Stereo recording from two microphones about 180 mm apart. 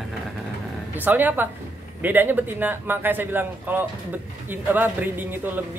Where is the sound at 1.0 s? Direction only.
10° right (ahead or behind).